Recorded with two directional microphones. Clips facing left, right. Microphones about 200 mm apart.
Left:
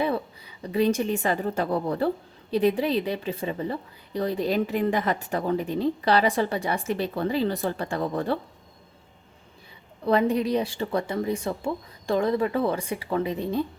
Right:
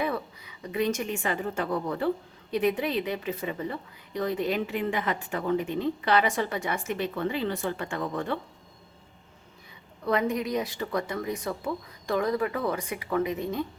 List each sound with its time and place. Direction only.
0.0 s a woman's voice: 30° left (ahead or behind)
10.1 s speech: 30° left (ahead or behind)